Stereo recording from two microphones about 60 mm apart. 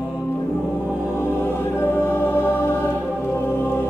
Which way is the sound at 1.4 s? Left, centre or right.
Left.